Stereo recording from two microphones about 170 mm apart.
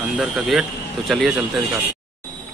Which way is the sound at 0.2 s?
5° right (ahead or behind).